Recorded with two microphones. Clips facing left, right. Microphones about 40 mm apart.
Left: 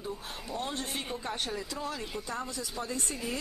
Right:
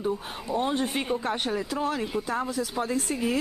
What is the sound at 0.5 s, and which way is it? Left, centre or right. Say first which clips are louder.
Speech: right 10 dB; right.